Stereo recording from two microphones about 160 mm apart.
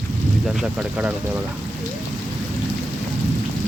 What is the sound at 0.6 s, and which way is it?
Speech, 5° right (ahead or behind).